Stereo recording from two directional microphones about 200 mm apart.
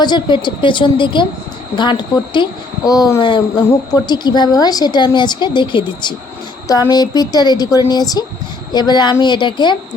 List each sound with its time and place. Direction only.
0.0 s a woman's voice: 20° left (ahead or behind)